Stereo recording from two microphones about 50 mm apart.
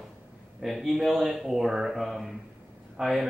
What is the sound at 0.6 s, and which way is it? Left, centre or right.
Speech, centre.